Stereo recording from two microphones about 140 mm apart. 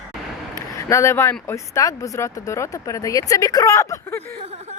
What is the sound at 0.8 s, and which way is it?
Speech, 20° left (ahead or behind).